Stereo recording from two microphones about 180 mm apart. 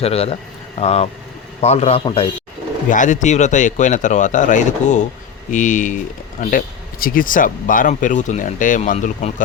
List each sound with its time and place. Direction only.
0.0 s a man's voice: 35° left (ahead or behind)
2.9 s speech: 45° left (ahead or behind)